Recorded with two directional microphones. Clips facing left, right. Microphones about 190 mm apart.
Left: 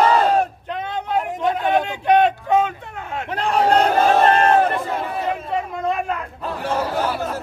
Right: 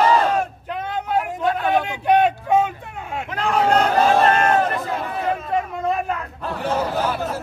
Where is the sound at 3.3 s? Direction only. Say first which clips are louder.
Left 1 dB; 35° left (ahead or behind).